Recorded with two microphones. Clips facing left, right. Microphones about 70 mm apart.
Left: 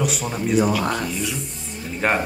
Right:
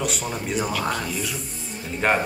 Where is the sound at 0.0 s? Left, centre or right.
Centre.